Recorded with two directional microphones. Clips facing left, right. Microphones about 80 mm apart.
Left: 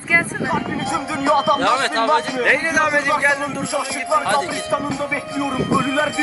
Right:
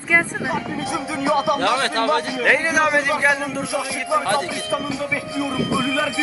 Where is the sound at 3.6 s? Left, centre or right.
Left.